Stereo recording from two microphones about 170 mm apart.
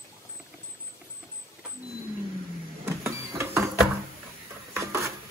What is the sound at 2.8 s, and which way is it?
Printer, 15° right (ahead or behind).